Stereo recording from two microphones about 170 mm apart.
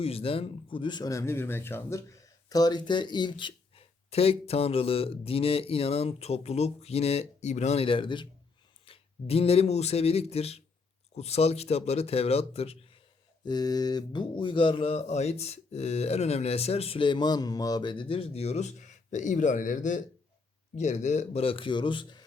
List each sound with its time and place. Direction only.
0.0 s speech: 35° left (ahead or behind)
13.4 s speech: 25° left (ahead or behind)